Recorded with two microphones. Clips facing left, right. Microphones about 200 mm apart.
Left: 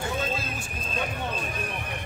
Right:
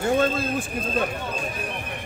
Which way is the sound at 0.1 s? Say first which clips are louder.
Right 9 dB; 55° right (ahead or behind).